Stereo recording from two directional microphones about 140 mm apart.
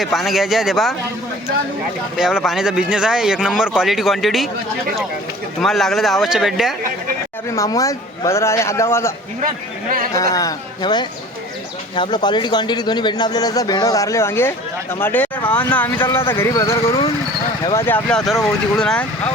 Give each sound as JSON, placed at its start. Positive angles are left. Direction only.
{"t": 0.0, "sound": "speech", "side_deg": 0}
{"t": 2.1, "sound": "speech", "side_deg": -5}
{"t": 5.5, "sound": "speech", "side_deg": 0}
{"t": 7.5, "sound": "speech", "side_deg": 25}
{"t": 10.2, "sound": "speech", "side_deg": 25}
{"t": 18.3, "sound": "speech", "side_deg": 0}